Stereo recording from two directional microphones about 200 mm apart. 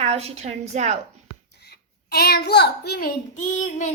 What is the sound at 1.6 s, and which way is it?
A child's voice, 50° left (ahead or behind).